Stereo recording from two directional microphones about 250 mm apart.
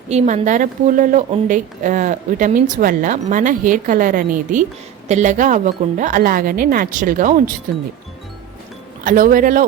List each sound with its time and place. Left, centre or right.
0.1 s a woman's voice: right
9.0 s a woman's voice: right